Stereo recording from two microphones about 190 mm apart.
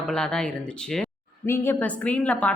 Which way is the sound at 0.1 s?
5° left (ahead or behind).